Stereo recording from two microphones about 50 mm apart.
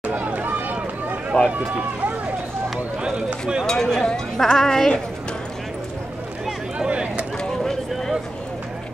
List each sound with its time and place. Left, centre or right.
0.0 s run: right
1.3 s speech: centre
3.0 s speech: centre
3.6 s speech: centre
6.8 s a sound: right
7.3 s a sound: centre